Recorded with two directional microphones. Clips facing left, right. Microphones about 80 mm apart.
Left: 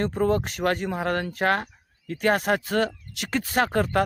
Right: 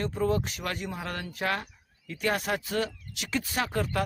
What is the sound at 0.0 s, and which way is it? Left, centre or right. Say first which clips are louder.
Speech: left 5 dB; left.